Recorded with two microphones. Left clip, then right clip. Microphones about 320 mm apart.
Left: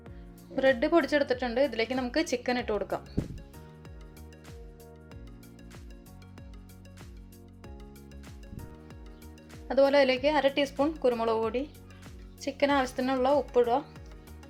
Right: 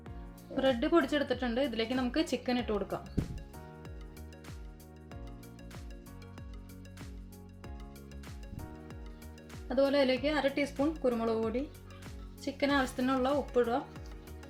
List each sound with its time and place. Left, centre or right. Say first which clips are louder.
0.5 s speech: left 4 dB; centre
3.0 s speech: left 3 dB; centre
9.6 s speech: left 5 dB; left